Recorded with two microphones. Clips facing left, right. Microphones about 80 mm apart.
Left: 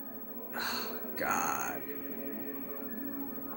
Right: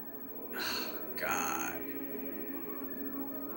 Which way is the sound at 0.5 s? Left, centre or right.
Left.